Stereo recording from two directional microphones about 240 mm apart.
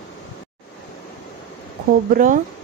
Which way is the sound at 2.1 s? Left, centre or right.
Right.